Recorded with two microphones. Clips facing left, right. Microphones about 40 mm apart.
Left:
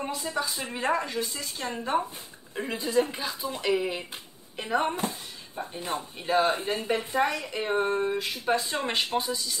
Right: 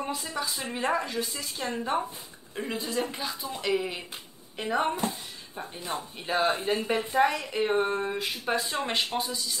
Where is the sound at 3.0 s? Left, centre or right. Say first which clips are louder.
Left 7 dB; left.